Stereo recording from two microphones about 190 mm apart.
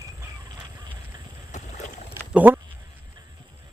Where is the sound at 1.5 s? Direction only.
40° left (ahead or behind).